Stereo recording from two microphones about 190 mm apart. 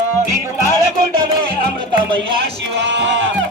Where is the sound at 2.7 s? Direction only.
65° right (ahead or behind).